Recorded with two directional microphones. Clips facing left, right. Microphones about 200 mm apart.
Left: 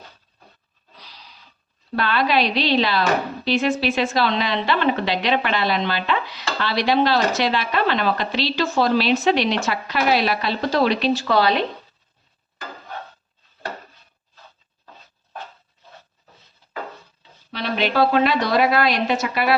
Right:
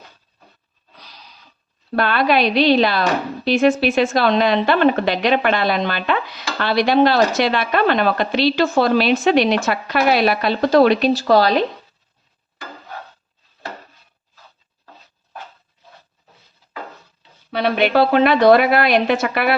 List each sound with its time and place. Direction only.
2.0 s a woman's voice: 50° right (ahead or behind)
17.5 s a woman's voice: 60° right (ahead or behind)